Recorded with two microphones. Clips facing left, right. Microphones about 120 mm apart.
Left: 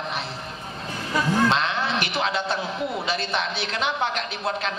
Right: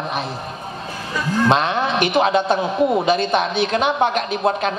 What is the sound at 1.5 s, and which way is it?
Music, 55° right (ahead or behind).